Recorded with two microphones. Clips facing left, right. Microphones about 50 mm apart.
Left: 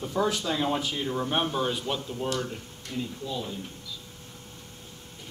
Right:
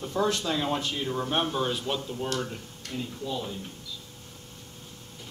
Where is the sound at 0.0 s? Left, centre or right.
Centre.